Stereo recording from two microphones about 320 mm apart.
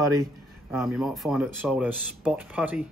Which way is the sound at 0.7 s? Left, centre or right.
Centre.